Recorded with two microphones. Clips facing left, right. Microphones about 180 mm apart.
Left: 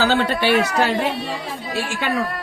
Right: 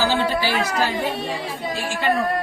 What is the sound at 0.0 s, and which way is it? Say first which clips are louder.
A woman's voice: left 2 dB; 65° left (ahead or behind).